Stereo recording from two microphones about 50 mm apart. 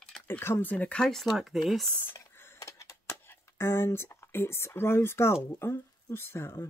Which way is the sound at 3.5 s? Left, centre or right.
Left.